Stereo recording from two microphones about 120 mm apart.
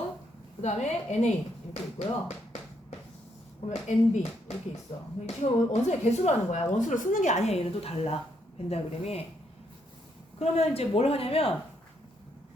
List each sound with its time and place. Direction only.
0.6 s a woman's voice: 75° left (ahead or behind)
3.7 s a woman's voice: 70° left (ahead or behind)
4.9 s speech: 50° left (ahead or behind)
5.2 s a woman's voice: 70° left (ahead or behind)
6.7 s a woman's voice: 90° left; by 9.2 s 60° left (ahead or behind)
10.4 s speech: 55° left (ahead or behind)